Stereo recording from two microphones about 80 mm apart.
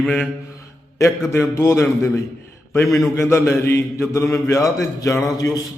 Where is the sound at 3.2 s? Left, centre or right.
Left.